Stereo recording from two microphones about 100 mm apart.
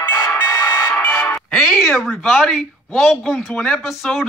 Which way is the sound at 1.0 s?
15° left (ahead or behind).